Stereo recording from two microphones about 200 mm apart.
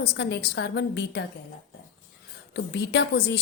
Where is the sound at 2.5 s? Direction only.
60° left (ahead or behind).